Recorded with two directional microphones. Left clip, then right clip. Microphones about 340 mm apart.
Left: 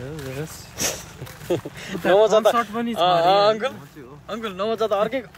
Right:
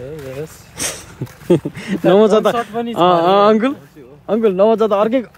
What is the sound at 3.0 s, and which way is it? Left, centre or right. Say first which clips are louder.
A man's voice: right 5 dB; centre.